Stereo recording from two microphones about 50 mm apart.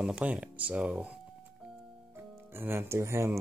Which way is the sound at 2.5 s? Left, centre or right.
Right.